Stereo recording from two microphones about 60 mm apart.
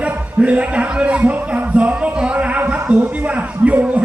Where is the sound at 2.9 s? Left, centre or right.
Centre.